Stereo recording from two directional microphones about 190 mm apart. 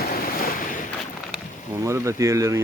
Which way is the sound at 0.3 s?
50° left (ahead or behind).